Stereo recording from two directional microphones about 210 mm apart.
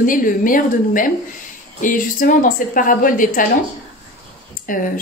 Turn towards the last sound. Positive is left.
turn(degrees=40)  # may be behind; listen again after turning